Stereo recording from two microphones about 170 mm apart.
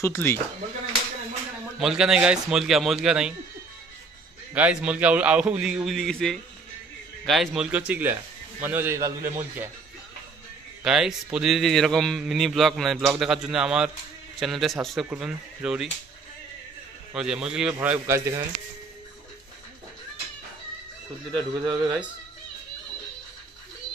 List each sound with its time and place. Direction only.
0.0 s speech: 15° left (ahead or behind)
1.8 s a man's voice: centre (ahead or behind)
4.6 s a man's voice: 10° right (ahead or behind)
10.8 s a man's voice: 5° right (ahead or behind)
17.1 s a man's voice: 5° right (ahead or behind)
21.3 s a man's voice: 25° right (ahead or behind)